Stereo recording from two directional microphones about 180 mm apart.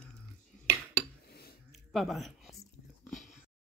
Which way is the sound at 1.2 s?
60° left (ahead or behind).